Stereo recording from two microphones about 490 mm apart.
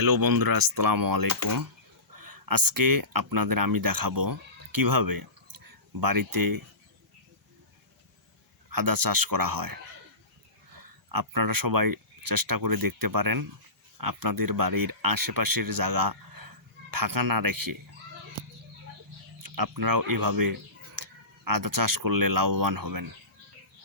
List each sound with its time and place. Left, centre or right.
0.0 s speech: right
8.7 s speech: right
19.4 s speech: right